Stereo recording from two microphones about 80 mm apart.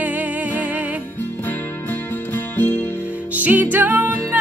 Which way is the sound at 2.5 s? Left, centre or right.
Centre.